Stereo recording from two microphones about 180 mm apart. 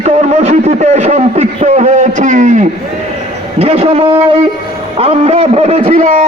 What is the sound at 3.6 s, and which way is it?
A man's voice, 35° right (ahead or behind).